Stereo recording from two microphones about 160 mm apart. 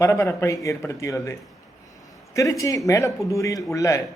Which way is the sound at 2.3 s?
20° left (ahead or behind).